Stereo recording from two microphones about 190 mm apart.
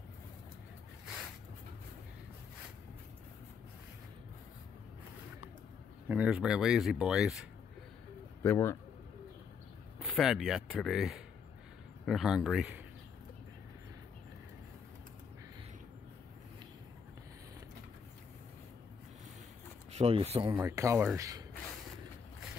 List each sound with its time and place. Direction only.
1.0 s a sound: 5° right (ahead or behind)
6.0 s speech: 5° right (ahead or behind)
8.4 s speech: 15° left (ahead or behind)
9.9 s speech: centre (ahead or behind)
19.9 s speech: 35° right (ahead or behind)
20.5 s speech: 15° right (ahead or behind)